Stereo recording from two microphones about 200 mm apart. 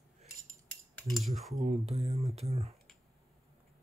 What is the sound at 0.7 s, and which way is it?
Cutlery, 5° left (ahead or behind).